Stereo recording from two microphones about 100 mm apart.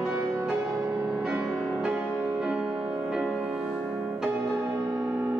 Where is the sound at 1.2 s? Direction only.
5° right (ahead or behind).